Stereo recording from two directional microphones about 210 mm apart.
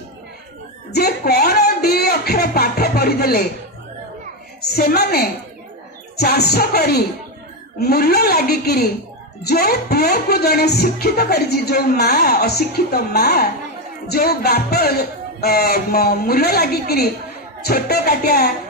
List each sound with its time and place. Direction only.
0.9 s speech: 50° left (ahead or behind)
4.6 s speech: 45° left (ahead or behind)